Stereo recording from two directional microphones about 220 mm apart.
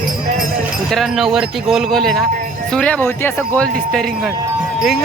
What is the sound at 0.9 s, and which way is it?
Speech, centre (ahead or behind).